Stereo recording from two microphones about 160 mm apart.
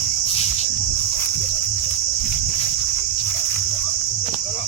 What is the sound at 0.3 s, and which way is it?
Cricket, 40° left (ahead or behind).